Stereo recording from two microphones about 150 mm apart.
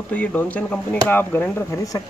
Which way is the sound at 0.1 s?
10° left (ahead or behind).